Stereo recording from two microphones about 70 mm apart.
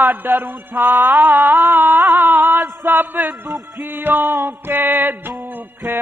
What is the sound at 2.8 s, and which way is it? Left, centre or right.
Music, right.